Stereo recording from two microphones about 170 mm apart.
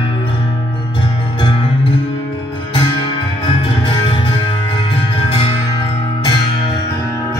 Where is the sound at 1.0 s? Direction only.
25° left (ahead or behind).